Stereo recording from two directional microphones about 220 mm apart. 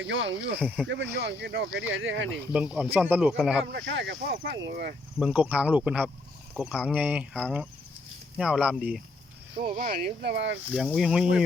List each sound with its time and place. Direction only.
0.0 s speech: 60° right (ahead or behind)
2.5 s speech: 5° right (ahead or behind)
3.7 s speech: 50° right (ahead or behind)
5.2 s speech: 5° right (ahead or behind)
9.7 s speech: 40° right (ahead or behind)
10.7 s speech: 5° left (ahead or behind)